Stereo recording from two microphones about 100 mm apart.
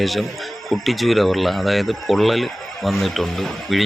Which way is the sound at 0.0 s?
Centre (ahead or behind).